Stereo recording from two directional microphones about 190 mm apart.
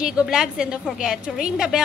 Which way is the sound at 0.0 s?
5° right (ahead or behind).